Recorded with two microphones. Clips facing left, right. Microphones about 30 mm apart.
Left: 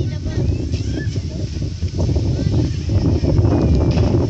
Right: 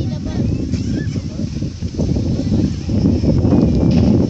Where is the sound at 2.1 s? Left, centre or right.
Left.